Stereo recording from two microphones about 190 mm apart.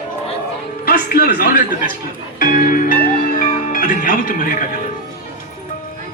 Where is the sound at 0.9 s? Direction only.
50° left (ahead or behind).